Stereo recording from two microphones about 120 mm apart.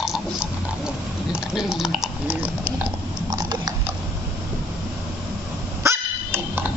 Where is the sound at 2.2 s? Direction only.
15° right (ahead or behind).